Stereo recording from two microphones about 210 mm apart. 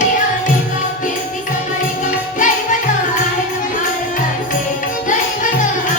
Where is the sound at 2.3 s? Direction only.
40° left (ahead or behind).